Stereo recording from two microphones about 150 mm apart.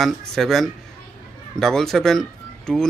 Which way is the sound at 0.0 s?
Centre (ahead or behind).